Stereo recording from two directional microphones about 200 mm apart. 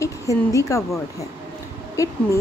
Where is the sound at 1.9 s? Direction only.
15° left (ahead or behind).